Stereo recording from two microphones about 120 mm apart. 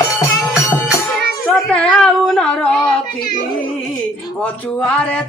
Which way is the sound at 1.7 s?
10° left (ahead or behind).